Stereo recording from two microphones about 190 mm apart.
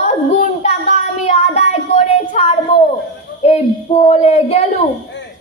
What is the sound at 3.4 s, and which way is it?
Child singing, 35° left (ahead or behind).